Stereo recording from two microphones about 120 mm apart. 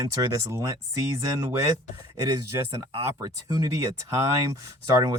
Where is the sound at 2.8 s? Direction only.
30° right (ahead or behind).